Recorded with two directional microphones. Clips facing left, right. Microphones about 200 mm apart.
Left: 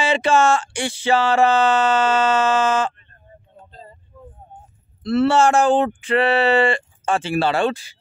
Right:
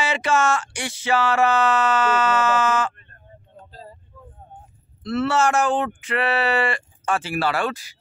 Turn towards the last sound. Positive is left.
turn(degrees=25)  # may be behind; listen again after turning